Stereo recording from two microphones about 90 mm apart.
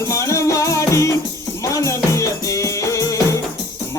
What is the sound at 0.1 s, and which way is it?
Music, 35° left (ahead or behind).